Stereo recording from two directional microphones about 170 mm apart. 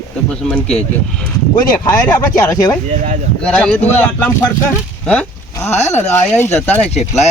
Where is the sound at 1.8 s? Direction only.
15° left (ahead or behind).